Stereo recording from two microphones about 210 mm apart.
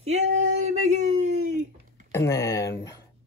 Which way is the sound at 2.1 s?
15° left (ahead or behind).